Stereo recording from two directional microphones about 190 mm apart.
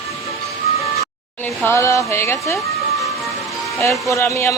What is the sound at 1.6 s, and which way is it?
Speech, 15° left (ahead or behind).